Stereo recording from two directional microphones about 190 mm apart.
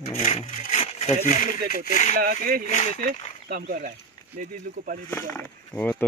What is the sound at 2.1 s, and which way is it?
Speech, 50° right (ahead or behind).